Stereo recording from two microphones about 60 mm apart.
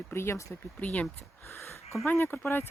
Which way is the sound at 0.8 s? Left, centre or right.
Left.